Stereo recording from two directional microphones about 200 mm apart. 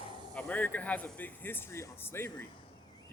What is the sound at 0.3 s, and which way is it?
Speech, 5° left (ahead or behind).